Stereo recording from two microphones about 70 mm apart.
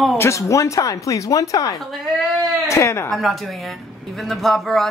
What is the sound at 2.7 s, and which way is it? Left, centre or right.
Speech, left.